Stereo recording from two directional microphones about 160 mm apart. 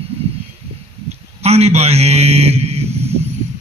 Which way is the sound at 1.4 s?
40° right (ahead or behind).